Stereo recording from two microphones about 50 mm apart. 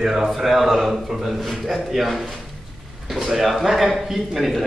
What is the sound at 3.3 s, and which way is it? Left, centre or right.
A man's voice, centre.